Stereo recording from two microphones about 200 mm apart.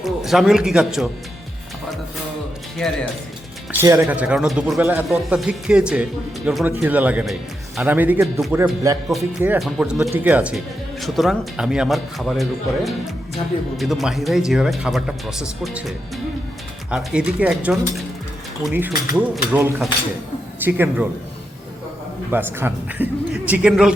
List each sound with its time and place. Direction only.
0.0 s speech: centre (ahead or behind)
3.7 s a man's voice: 10° right (ahead or behind)
22.3 s a man's voice: 10° right (ahead or behind)